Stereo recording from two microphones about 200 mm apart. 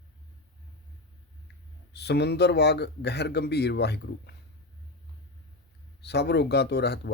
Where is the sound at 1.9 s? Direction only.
55° left (ahead or behind).